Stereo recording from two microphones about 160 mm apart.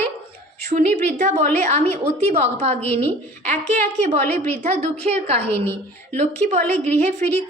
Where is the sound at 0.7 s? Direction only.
45° right (ahead or behind).